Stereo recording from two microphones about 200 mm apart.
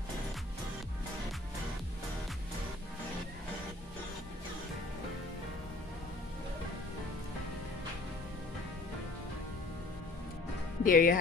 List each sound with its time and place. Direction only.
10.8 s speech: 45° left (ahead or behind)